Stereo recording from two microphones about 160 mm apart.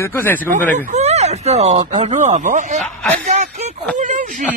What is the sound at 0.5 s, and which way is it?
Speech, 45° right (ahead or behind).